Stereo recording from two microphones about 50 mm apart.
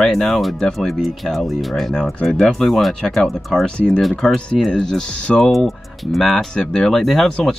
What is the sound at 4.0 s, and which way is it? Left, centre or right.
Speech, centre.